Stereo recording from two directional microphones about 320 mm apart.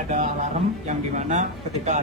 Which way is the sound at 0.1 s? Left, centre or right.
Right.